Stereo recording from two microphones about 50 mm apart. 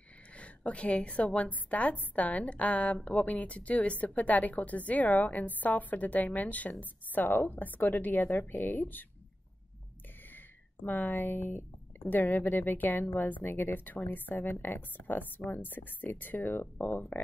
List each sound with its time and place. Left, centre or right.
0.4 s a woman's voice: left
10.9 s a woman's voice: left